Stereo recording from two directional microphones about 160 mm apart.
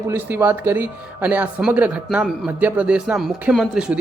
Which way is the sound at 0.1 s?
15° right (ahead or behind).